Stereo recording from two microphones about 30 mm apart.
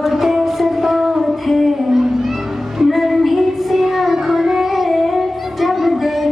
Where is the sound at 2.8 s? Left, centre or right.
Centre.